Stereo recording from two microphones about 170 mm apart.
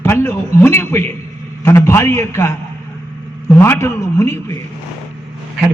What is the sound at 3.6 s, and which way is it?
Speech, 15° left (ahead or behind).